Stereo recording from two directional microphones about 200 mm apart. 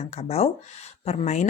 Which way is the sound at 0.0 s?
30° left (ahead or behind).